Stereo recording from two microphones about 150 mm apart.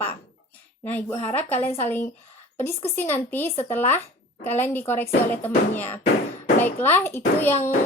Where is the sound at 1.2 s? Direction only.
10° left (ahead or behind).